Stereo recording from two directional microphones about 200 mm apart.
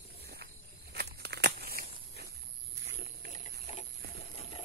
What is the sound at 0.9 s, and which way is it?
Crumpling, 55° right (ahead or behind).